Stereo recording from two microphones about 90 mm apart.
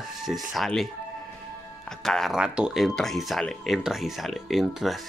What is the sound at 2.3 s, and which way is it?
Speech, 10° right (ahead or behind).